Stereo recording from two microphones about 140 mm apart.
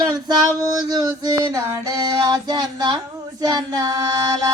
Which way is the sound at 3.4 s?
30° right (ahead or behind).